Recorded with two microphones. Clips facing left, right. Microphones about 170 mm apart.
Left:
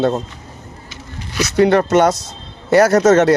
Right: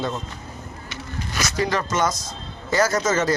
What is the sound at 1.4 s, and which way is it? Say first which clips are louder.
Speech: left 11 dB; 65° left (ahead or behind).